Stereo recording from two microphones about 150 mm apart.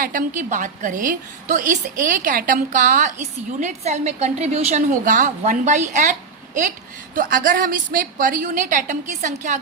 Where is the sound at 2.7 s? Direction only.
55° right (ahead or behind).